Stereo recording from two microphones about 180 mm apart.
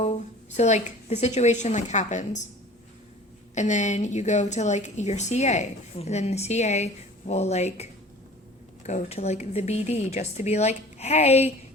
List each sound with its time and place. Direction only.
0.0 s a woman's voice: 40° left (ahead or behind)
3.5 s a woman's voice: 40° left (ahead or behind)
8.9 s a woman's voice: 40° left (ahead or behind)